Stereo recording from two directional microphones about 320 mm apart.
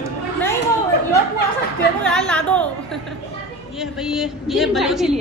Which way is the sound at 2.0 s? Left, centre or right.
Centre.